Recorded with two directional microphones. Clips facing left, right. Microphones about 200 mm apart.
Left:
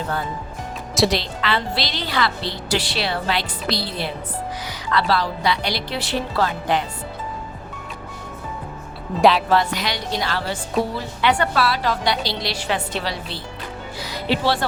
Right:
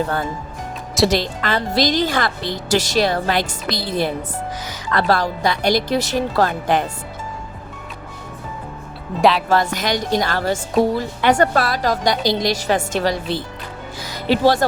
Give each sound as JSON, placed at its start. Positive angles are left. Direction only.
{"t": 0.9, "sound": "speech", "side_deg": 0}
{"t": 1.2, "sound": "a woman's voice", "side_deg": -45}
{"t": 9.1, "sound": "speech", "side_deg": 0}
{"t": 9.5, "sound": "a woman's voice", "side_deg": -45}
{"t": 14.0, "sound": "music", "side_deg": -45}